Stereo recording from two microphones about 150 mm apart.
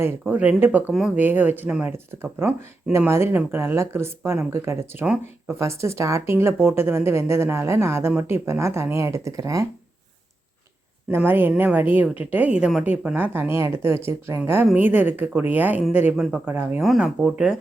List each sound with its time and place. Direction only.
0.0 s speech: 10° right (ahead or behind)
11.1 s speech: 15° right (ahead or behind)